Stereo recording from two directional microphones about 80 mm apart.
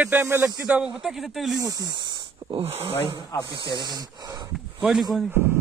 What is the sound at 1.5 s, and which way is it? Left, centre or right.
Speech, right.